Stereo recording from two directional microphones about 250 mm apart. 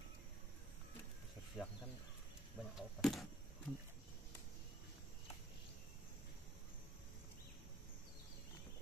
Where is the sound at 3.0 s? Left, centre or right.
Centre.